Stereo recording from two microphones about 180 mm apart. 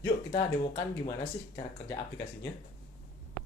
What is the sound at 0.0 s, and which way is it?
Speech, 25° left (ahead or behind).